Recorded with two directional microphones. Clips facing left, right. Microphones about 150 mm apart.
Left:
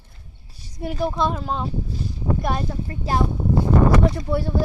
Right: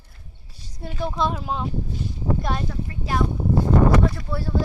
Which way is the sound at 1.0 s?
5° left (ahead or behind).